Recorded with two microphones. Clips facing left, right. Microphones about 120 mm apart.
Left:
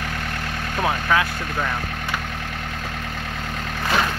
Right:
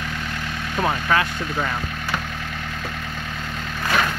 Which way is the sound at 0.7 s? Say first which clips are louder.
Even; centre (ahead or behind).